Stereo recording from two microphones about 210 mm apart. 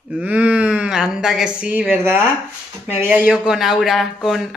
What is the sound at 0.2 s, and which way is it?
A woman's voice, 5° right (ahead or behind).